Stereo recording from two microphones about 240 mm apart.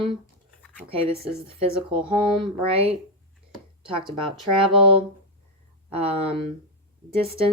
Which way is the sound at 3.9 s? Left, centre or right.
Right.